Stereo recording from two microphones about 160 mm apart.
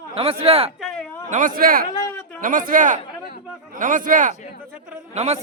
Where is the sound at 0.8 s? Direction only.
5° left (ahead or behind).